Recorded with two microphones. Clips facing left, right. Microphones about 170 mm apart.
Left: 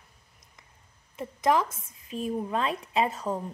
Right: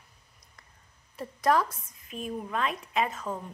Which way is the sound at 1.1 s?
20° left (ahead or behind).